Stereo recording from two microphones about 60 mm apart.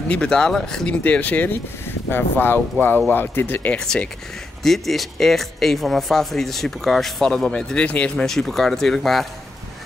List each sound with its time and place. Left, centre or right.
0.1 s speech: centre
1.0 s speech: left
3.8 s speech: centre
8.3 s speech: centre